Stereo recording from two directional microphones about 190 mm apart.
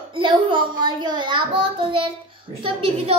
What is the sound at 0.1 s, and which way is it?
A child's voice, 25° right (ahead or behind).